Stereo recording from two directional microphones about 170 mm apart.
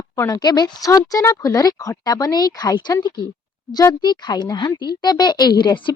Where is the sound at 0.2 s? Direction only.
20° left (ahead or behind).